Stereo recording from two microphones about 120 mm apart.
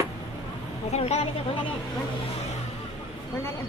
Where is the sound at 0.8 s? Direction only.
65° left (ahead or behind).